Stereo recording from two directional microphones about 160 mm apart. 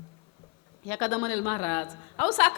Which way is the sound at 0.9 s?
10° left (ahead or behind).